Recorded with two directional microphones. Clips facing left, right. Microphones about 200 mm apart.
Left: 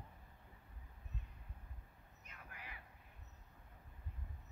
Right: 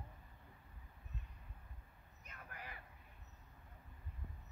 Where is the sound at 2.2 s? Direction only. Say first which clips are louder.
Right 3 dB; 45° right (ahead or behind).